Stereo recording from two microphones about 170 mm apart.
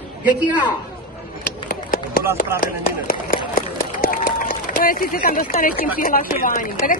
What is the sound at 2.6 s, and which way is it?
Speech, 60° left (ahead or behind).